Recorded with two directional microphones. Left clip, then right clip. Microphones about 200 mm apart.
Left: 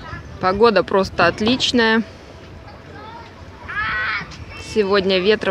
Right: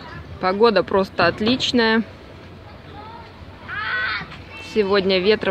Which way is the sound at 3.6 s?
40° right (ahead or behind).